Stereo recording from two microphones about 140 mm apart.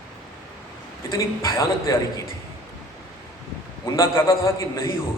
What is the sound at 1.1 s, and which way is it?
Speech, 20° left (ahead or behind).